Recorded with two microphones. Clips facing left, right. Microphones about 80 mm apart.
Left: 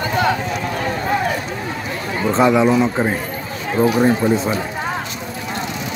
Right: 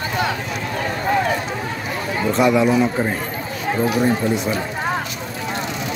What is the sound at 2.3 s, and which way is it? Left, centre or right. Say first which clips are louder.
Speech: left 2 dB; left.